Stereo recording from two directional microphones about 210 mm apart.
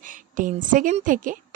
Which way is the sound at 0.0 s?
40° right (ahead or behind).